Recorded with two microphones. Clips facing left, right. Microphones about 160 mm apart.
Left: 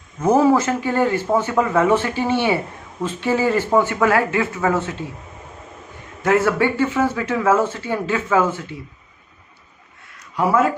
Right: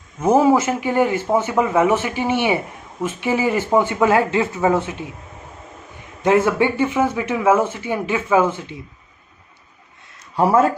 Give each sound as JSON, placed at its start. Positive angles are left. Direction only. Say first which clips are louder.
{"t": 0.2, "sound": "speech", "louder": "even", "side_deg": -10}
{"t": 6.2, "sound": "speech", "louder": "right 1 dB", "side_deg": -20}
{"t": 10.3, "sound": "speech", "louder": "right 2 dB", "side_deg": -30}